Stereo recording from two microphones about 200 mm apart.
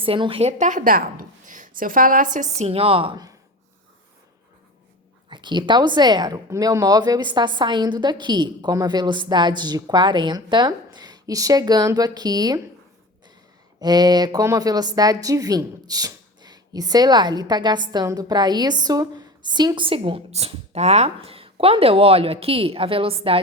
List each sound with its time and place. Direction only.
0.0 s a woman's voice: 25° right (ahead or behind)
5.3 s a woman's voice: 20° right (ahead or behind)
13.7 s a woman's voice: 20° right (ahead or behind)